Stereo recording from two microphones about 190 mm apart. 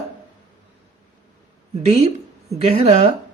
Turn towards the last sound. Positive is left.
turn(degrees=-30)  # may be behind; listen again after turning